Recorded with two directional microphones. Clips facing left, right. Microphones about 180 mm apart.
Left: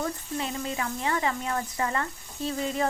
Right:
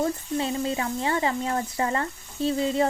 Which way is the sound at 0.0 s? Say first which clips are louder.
Right 5 dB; 30° right (ahead or behind).